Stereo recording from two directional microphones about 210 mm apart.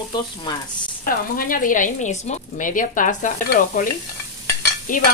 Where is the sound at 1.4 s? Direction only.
40° left (ahead or behind).